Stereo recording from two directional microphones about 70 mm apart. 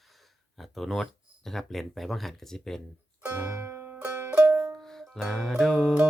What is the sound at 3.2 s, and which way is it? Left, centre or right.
Music, right.